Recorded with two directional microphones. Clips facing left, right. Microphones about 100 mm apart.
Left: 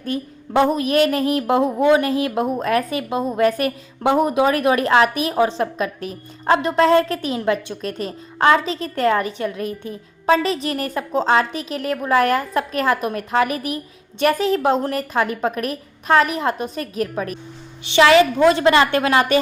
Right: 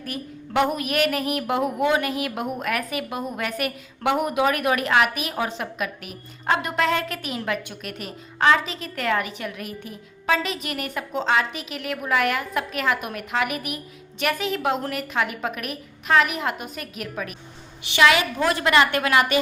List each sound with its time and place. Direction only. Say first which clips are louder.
0.0 s a woman's voice: left 7 dB; 30° left (ahead or behind)